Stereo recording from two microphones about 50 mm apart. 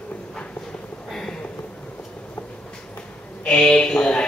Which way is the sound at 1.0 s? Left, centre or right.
Centre.